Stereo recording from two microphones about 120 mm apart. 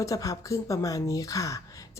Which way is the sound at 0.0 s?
30° left (ahead or behind).